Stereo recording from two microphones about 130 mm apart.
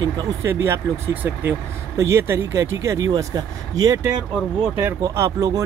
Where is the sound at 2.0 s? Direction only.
20° right (ahead or behind).